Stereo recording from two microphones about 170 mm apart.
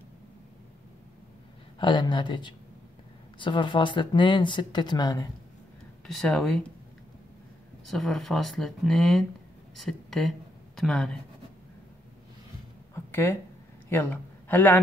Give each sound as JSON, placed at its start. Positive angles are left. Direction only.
{"t": 1.8, "sound": "speech", "side_deg": 25}
{"t": 6.0, "sound": "speech", "side_deg": 5}
{"t": 7.8, "sound": "speech", "side_deg": 0}
{"t": 12.9, "sound": "a sound", "side_deg": 15}
{"t": 13.8, "sound": "a man's voice", "side_deg": 10}